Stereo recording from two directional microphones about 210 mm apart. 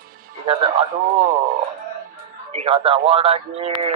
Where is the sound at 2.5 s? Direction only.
30° right (ahead or behind).